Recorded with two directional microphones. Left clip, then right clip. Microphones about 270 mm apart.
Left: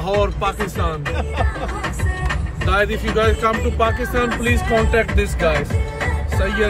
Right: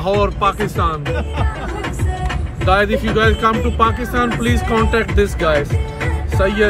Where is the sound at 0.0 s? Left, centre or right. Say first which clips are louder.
Right 3 dB; centre.